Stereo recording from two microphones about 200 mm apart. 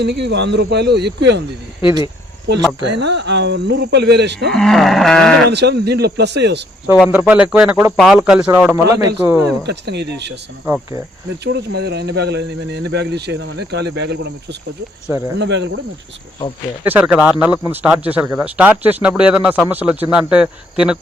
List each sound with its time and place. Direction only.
0.0 s speech: 55° right (ahead or behind)
2.8 s speech: 60° right (ahead or behind)
4.5 s speech: centre (ahead or behind)
5.5 s speech: 55° right (ahead or behind)
6.9 s a man's voice: 5° right (ahead or behind)
9.6 s speech: 55° right (ahead or behind)
11.7 s speech: 55° right (ahead or behind)
15.4 s speech: 60° right (ahead or behind)
16.8 s speech: 5° right (ahead or behind)